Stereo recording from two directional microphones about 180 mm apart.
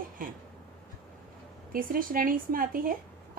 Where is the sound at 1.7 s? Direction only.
50° right (ahead or behind).